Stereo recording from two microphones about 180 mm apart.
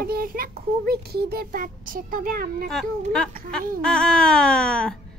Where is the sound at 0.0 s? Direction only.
55° right (ahead or behind).